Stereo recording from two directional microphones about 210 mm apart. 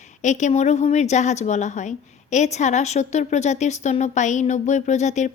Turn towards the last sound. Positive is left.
turn(degrees=35)  # may be behind; listen again after turning